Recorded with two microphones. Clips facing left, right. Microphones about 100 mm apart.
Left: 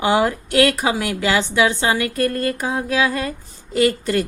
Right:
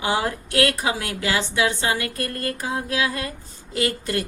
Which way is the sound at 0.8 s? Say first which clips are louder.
Left 5 dB; 90° left.